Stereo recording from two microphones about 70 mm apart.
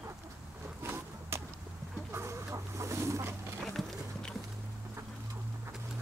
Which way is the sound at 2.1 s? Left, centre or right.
Right.